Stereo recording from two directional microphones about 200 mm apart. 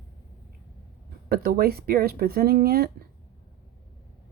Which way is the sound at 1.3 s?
50° right (ahead or behind).